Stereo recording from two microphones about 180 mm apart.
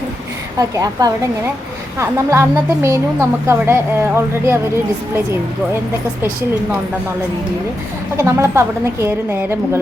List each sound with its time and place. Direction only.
0.6 s a woman's voice: 20° right (ahead or behind)
8.1 s a woman's voice: 15° right (ahead or behind)